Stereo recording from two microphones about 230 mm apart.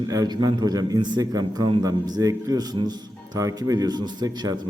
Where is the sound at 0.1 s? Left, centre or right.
Centre.